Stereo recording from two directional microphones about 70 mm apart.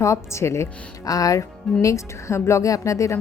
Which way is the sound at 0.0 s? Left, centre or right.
Left.